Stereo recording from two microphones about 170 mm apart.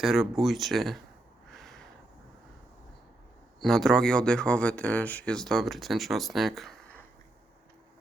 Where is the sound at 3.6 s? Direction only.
Centre (ahead or behind).